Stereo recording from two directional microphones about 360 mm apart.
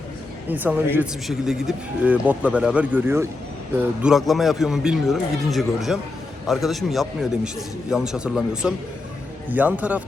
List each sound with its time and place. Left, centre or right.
0.4 s speech: centre